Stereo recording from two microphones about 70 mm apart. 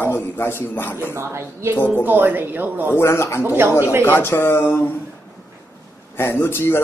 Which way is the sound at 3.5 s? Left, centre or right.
Right.